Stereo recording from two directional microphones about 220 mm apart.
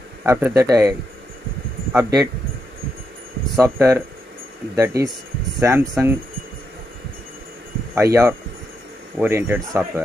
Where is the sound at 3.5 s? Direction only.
15° right (ahead or behind).